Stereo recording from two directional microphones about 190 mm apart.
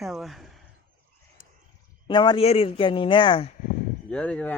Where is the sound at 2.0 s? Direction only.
25° left (ahead or behind).